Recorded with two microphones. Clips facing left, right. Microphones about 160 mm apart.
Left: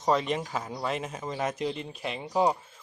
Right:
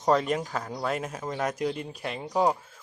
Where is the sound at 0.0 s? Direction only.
Centre (ahead or behind).